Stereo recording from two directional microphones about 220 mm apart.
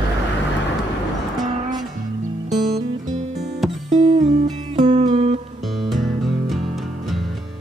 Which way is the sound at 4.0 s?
30° right (ahead or behind).